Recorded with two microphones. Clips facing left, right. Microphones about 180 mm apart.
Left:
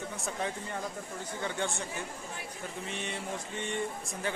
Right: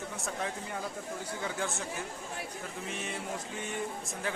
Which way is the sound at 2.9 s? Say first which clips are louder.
Even; centre (ahead or behind).